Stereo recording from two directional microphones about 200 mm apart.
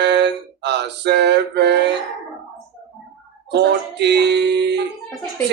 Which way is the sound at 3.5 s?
55° right (ahead or behind).